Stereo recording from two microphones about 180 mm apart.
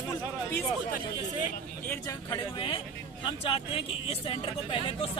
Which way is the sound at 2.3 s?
25° left (ahead or behind).